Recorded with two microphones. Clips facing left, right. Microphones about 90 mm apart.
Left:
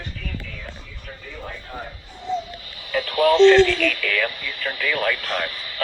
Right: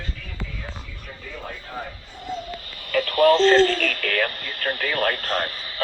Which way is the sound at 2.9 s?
50° right (ahead or behind).